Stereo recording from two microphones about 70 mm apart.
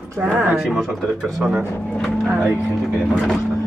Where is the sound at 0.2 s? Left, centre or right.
Right.